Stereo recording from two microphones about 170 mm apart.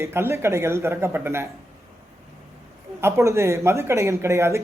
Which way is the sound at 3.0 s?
15° right (ahead or behind).